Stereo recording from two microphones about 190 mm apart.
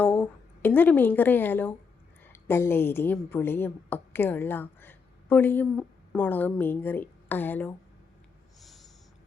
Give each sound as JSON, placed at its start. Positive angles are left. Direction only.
{"t": 0.0, "sound": "a woman's voice", "side_deg": 10}
{"t": 8.6, "sound": "snort", "side_deg": 0}